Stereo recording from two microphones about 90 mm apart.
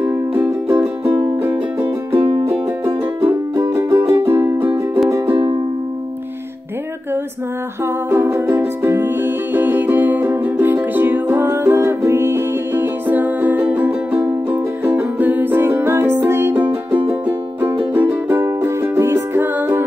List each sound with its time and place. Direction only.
0.3 s music: 30° right (ahead or behind)
7.8 s music: 30° right (ahead or behind)
18.3 s music: 25° right (ahead or behind)